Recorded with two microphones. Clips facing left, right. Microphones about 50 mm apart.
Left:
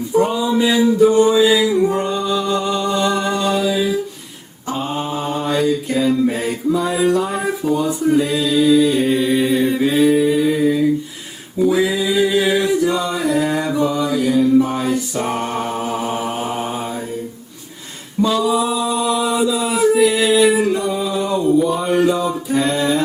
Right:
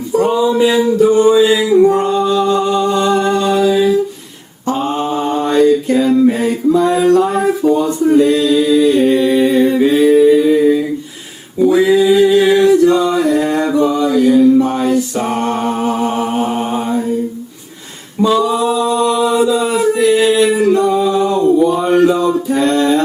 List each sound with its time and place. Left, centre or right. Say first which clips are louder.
0.4 s a sound: right 5 dB; centre
1.0 s music: right 3 dB; centre
3.2 s singing: right 5 dB; centre
5.3 s a sound: right 7 dB; centre
11.7 s male singing: right 9 dB; centre
13.1 s mantra: right 5 dB; centre
18.3 s singing: right 4 dB; centre
19.9 s music: right 2 dB; centre
20.4 s singing: right 4 dB; centre
21.2 s a sound: right 1 dB; centre